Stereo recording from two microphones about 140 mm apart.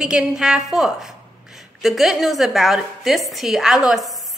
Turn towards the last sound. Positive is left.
turn(degrees=0)  # may be behind; listen again after turning